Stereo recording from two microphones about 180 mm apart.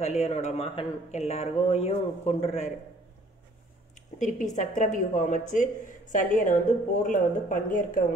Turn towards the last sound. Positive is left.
turn(degrees=45)  # may be behind; listen again after turning